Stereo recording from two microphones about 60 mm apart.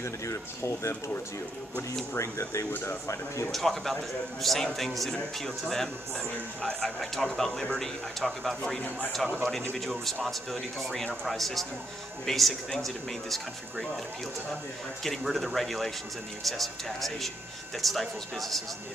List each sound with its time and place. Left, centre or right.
0.0 s speech: left
2.1 s speech: left
3.5 s speech: centre
15.0 s speech: centre